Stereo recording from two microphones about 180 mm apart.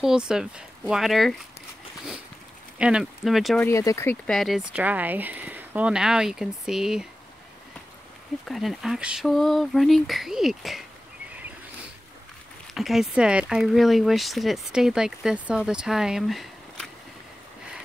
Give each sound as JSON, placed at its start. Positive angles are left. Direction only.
{"t": 0.0, "sound": "speech", "side_deg": -5}
{"t": 2.8, "sound": "speech", "side_deg": -5}
{"t": 3.6, "sound": "speech", "side_deg": 15}
{"t": 4.3, "sound": "speech", "side_deg": 0}
{"t": 8.5, "sound": "speech", "side_deg": 0}
{"t": 12.7, "sound": "speech", "side_deg": 0}